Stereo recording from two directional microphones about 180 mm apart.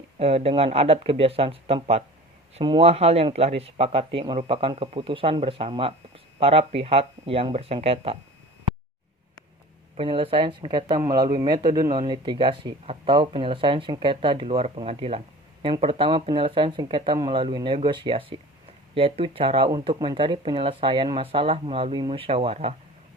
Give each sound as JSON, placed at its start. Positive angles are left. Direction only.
{"t": 0.2, "sound": "speech", "side_deg": -35}
{"t": 10.0, "sound": "speech", "side_deg": -30}